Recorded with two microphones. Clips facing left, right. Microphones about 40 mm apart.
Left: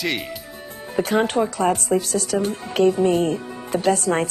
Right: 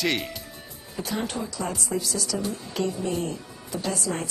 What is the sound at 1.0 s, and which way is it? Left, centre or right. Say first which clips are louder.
Speech: left 11 dB; left.